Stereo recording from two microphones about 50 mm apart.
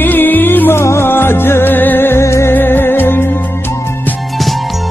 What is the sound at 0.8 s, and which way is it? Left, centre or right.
Music, left.